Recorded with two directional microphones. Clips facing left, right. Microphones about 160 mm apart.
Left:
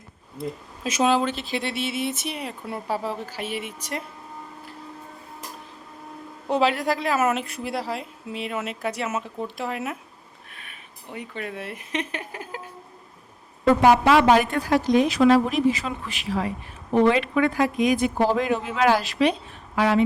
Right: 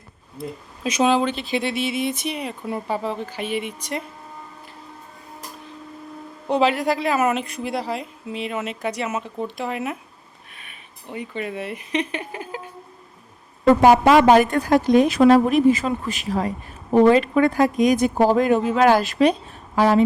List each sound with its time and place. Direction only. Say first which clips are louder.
0.9 s a woman's voice: right 2 dB; 5° left (ahead or behind)
6.5 s a woman's voice: right 3 dB; centre (ahead or behind)
13.8 s a woman's voice: right 3 dB; 45° right (ahead or behind)